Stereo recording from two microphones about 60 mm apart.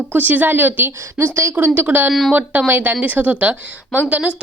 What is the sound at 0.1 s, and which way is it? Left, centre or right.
A woman's voice, right.